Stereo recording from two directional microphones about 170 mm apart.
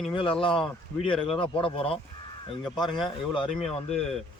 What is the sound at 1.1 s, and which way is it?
Speech, 5° left (ahead or behind).